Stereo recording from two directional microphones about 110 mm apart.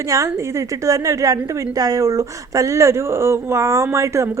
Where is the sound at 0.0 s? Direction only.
30° right (ahead or behind).